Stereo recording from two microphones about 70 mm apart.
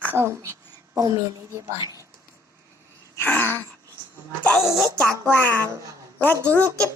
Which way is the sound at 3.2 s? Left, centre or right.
Left.